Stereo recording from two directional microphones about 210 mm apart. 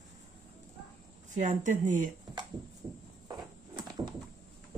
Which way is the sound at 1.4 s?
35° right (ahead or behind).